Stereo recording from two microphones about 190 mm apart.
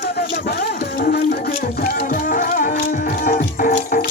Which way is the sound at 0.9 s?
50° left (ahead or behind).